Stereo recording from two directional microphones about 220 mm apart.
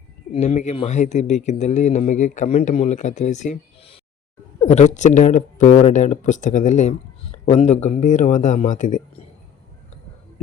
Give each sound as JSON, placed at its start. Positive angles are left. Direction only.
{"t": 0.3, "sound": "speech", "side_deg": 30}